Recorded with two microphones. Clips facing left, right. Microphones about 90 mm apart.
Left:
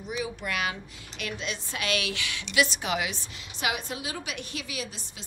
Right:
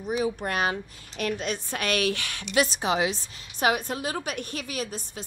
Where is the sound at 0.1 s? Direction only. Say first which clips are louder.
Right 5 dB; 40° right (ahead or behind).